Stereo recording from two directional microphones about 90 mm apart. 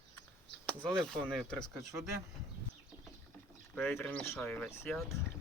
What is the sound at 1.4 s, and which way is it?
Speech, 10° left (ahead or behind).